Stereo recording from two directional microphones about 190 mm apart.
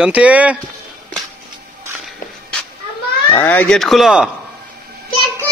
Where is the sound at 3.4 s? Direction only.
10° left (ahead or behind).